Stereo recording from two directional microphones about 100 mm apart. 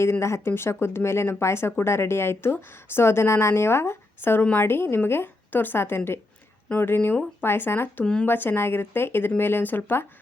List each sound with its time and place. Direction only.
0.0 s speech: 30° left (ahead or behind)
8.0 s speech: 10° left (ahead or behind)
8.3 s speech: 20° left (ahead or behind)